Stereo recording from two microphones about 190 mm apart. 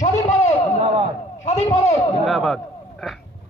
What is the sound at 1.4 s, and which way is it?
Speech, 35° left (ahead or behind).